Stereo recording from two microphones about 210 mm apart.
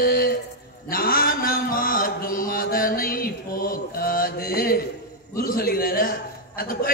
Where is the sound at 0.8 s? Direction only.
45° left (ahead or behind).